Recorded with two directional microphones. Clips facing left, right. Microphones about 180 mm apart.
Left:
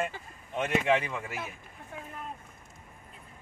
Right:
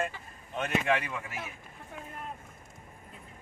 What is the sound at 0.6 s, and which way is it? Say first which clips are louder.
Speech: left 2 dB; 25° left (ahead or behind).